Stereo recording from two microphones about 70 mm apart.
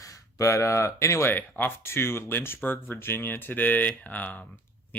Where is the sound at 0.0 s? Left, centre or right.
Left.